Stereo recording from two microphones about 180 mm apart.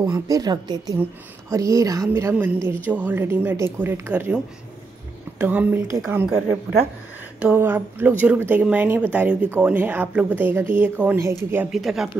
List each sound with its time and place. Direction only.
0.0 s a woman's voice: 20° right (ahead or behind)
5.4 s speech: 10° right (ahead or behind)
11.7 s speech: centre (ahead or behind)